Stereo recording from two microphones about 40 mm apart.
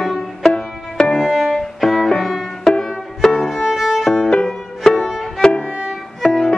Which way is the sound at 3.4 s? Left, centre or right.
Centre.